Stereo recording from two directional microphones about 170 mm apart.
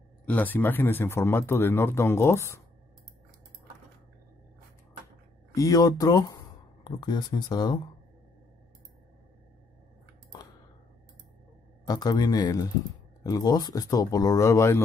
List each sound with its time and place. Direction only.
0.2 s speech: 10° left (ahead or behind)
5.5 s speech: 20° left (ahead or behind)
11.9 s speech: 25° left (ahead or behind)